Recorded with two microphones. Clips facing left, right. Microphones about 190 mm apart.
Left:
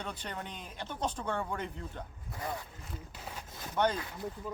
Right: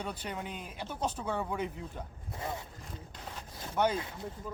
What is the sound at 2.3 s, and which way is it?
Speech, 25° right (ahead or behind).